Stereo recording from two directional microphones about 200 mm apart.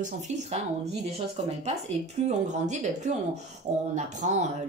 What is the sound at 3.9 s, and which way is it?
Speech, 35° right (ahead or behind).